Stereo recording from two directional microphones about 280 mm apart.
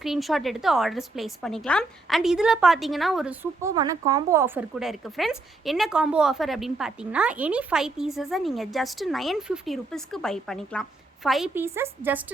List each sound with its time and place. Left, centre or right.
0.0 s a woman's voice: centre